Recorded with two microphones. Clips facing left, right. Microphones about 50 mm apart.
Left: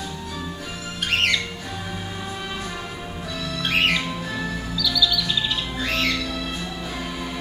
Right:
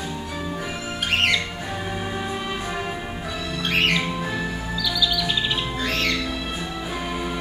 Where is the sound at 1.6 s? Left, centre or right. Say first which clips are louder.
Right 3 dB; right.